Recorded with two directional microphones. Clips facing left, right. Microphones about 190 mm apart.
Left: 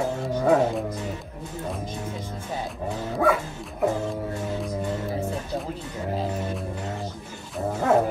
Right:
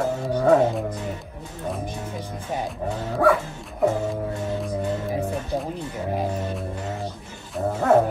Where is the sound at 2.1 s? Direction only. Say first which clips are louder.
Right 2 dB; 15° right (ahead or behind).